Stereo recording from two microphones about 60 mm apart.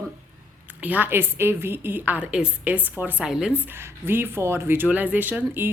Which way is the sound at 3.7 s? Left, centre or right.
Right.